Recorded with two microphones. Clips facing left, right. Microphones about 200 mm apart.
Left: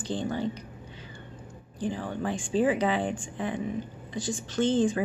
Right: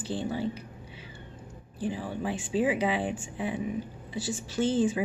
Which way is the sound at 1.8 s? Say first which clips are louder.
Left 1 dB; 5° right (ahead or behind).